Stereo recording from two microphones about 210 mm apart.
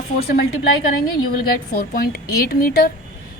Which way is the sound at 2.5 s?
45° left (ahead or behind).